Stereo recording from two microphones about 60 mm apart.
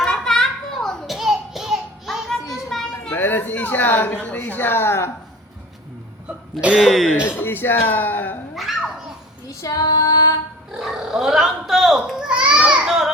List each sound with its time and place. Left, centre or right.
0.0 s children playing: centre
1.1 s child singing: centre
2.7 s children playing: centre
3.1 s a woman's voice: left
6.2 s hiccup: right
6.7 s speech: centre
7.2 s a woman's voice: left
9.5 s female singing: left
10.7 s speech: centre
12.3 s children playing: centre